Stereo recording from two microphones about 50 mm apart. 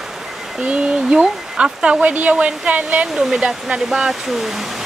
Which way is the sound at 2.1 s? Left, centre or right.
Right.